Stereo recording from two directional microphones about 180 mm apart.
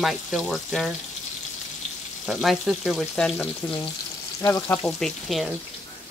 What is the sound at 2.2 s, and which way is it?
Speech, centre (ahead or behind).